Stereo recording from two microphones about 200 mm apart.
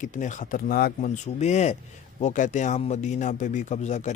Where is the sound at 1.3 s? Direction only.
35° left (ahead or behind).